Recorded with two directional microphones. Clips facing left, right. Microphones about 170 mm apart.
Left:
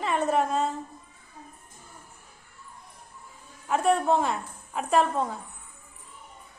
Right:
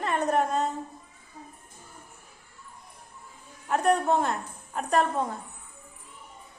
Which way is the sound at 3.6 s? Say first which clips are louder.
Even; centre (ahead or behind).